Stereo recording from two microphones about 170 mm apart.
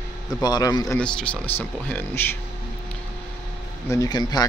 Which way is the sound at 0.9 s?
10° left (ahead or behind).